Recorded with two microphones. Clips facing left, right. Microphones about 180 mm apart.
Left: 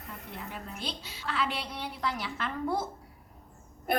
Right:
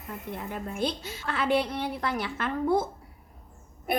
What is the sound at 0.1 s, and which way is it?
A woman's voice, 50° right (ahead or behind).